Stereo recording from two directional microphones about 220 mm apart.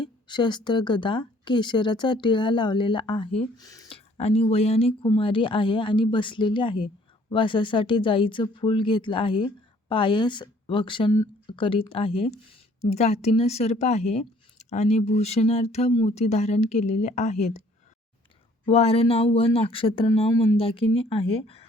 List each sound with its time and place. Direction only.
0.0 s speech: 20° left (ahead or behind)
18.6 s speech: 25° left (ahead or behind)